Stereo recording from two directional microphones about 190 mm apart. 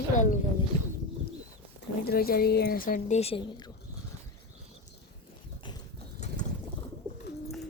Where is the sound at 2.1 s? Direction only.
55° left (ahead or behind); by 3.6 s 30° left (ahead or behind).